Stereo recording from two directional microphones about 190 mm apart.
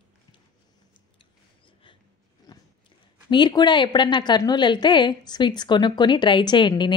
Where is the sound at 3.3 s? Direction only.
25° left (ahead or behind).